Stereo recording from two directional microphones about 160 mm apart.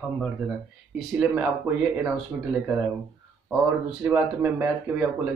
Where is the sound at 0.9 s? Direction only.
5° right (ahead or behind).